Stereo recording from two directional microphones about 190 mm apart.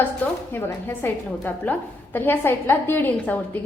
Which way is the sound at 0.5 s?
10° left (ahead or behind).